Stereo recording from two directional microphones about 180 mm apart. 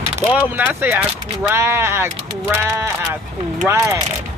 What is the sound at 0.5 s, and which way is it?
Speech, 10° right (ahead or behind).